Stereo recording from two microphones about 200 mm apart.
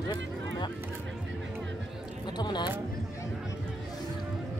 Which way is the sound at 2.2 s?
20° left (ahead or behind).